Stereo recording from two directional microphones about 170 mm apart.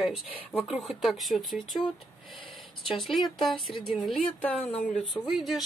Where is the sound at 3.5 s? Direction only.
30° left (ahead or behind).